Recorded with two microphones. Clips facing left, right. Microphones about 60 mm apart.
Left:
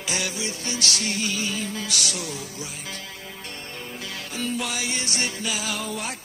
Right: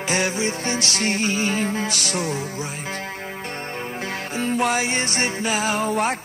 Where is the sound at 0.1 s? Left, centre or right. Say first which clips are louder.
Right 7 dB; right.